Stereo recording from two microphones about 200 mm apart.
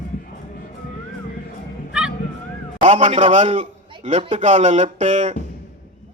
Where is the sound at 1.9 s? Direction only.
5° right (ahead or behind).